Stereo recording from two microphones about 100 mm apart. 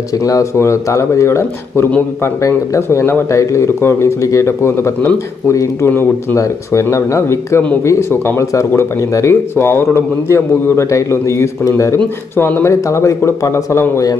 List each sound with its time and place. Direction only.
0.2 s speech: 35° left (ahead or behind)